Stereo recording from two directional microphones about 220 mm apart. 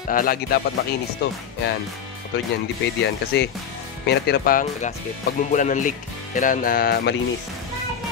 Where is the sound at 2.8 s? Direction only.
50° left (ahead or behind).